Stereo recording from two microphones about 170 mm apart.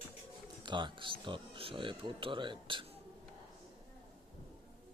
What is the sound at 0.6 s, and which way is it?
Speech, 25° right (ahead or behind).